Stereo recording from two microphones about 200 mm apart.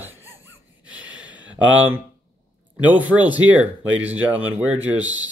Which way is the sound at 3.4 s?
90° right.